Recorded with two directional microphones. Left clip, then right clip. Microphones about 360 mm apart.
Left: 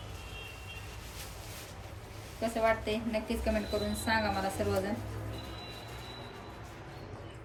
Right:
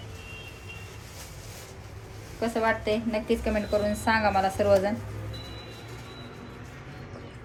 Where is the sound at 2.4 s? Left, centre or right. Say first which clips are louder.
Right 4 dB; centre.